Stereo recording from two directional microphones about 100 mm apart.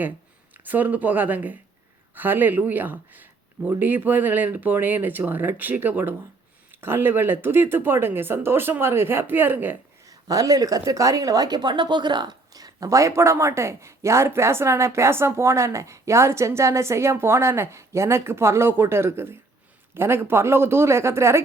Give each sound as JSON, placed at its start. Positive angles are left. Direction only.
{"t": 0.5, "sound": "a woman's voice", "side_deg": -20}
{"t": 10.1, "sound": "a woman's voice", "side_deg": -35}